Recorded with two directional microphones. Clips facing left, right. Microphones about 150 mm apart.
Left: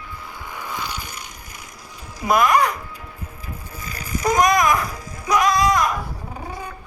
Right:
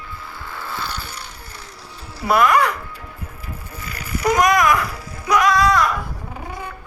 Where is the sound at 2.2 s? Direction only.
15° left (ahead or behind).